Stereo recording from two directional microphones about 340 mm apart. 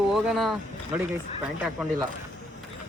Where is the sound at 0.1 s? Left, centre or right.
Centre.